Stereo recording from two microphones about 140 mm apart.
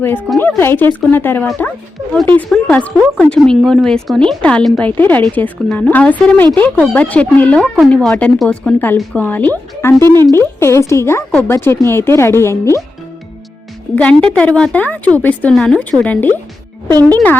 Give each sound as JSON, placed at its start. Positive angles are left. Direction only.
{"t": 0.0, "sound": "speech", "side_deg": 15}
{"t": 13.9, "sound": "speech", "side_deg": 10}
{"t": 16.9, "sound": "speech", "side_deg": -25}